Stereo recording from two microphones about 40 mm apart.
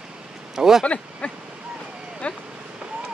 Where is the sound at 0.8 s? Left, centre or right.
Left.